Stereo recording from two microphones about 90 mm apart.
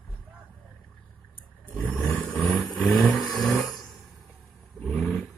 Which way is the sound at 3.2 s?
Centre (ahead or behind).